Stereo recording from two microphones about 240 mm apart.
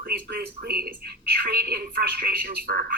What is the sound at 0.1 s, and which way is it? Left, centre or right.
Speech, right.